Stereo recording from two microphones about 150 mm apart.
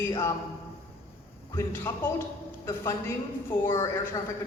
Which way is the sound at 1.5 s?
15° left (ahead or behind).